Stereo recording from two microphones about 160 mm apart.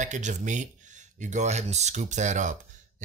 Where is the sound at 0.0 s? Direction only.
50° right (ahead or behind).